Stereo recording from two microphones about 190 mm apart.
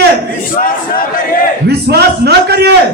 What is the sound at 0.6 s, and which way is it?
Battle cry, 50° left (ahead or behind).